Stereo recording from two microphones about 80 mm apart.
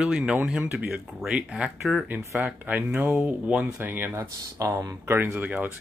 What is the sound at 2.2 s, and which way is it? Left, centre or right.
Speech, right.